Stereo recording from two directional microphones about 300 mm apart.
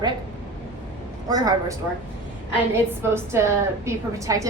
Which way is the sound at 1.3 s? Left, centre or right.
Centre.